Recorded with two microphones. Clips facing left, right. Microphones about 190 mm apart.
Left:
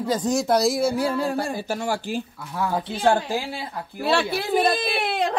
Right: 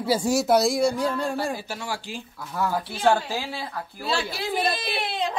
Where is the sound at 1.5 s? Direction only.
45° left (ahead or behind).